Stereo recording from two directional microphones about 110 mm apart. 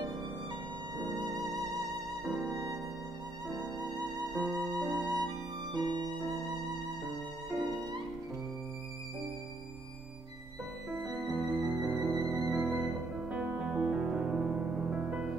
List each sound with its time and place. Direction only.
0.9 s music: 35° right (ahead or behind)
2.2 s music: centre (ahead or behind)
3.8 s music: centre (ahead or behind)
4.6 s music: 35° right (ahead or behind)
5.7 s music: 40° right (ahead or behind)
10.9 s music: centre (ahead or behind)